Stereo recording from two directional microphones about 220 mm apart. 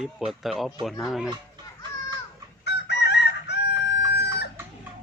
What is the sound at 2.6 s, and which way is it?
Chicken, 50° left (ahead or behind).